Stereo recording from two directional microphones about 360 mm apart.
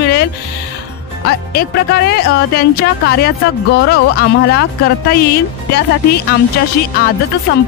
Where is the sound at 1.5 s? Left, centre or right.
Left.